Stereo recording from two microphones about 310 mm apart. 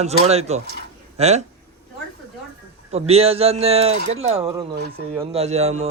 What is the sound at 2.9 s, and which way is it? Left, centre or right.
Speech, centre.